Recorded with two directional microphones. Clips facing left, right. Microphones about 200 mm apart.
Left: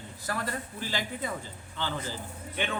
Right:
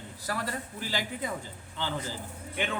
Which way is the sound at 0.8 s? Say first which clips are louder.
Right 1 dB; 15° right (ahead or behind).